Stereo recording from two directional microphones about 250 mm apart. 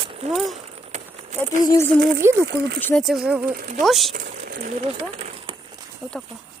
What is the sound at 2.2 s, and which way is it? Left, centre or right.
Speech, centre.